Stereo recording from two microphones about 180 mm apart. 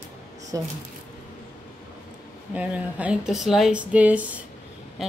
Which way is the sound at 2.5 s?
5° right (ahead or behind).